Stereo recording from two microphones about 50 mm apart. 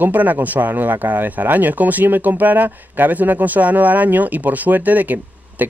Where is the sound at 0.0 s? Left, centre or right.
Right.